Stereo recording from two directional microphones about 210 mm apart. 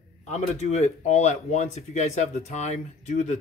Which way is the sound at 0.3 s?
30° left (ahead or behind).